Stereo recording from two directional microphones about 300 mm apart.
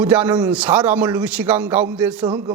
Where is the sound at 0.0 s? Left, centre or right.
Centre.